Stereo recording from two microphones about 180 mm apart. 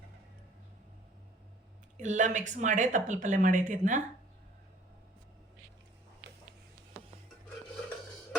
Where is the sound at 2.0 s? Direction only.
45° right (ahead or behind).